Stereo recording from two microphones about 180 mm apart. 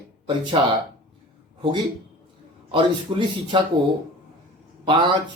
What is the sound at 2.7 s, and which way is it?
Speech, 25° right (ahead or behind).